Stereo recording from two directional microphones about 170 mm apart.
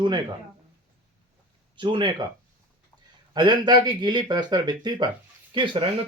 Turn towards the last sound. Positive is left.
turn(degrees=-30)  # may be behind; listen again after turning